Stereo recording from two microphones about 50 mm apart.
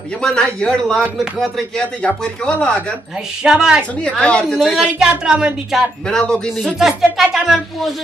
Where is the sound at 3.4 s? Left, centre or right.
Centre.